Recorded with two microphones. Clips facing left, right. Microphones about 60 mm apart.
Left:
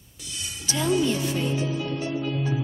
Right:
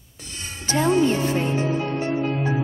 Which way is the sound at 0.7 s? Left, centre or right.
Right.